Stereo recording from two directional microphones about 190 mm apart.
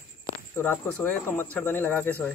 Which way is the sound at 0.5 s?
10° left (ahead or behind).